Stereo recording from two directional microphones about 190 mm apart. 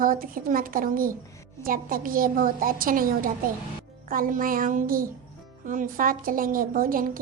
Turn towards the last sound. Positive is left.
turn(degrees=-45)  # may be behind; listen again after turning